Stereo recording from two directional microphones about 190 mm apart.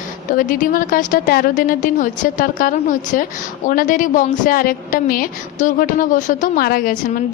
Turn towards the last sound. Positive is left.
turn(degrees=50)  # may be behind; listen again after turning